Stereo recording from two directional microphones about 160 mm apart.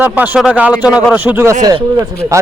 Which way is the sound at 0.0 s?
10° right (ahead or behind).